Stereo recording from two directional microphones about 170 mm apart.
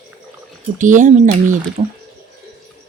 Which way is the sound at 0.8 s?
50° right (ahead or behind).